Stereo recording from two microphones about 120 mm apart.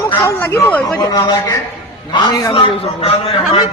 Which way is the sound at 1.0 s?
30° left (ahead or behind).